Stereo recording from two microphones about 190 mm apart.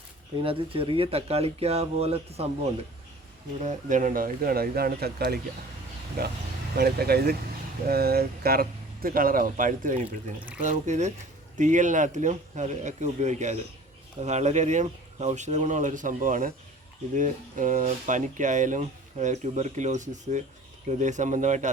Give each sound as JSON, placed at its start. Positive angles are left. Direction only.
{"t": 0.4, "sound": "speech", "side_deg": -30}
{"t": 3.6, "sound": "speech", "side_deg": -40}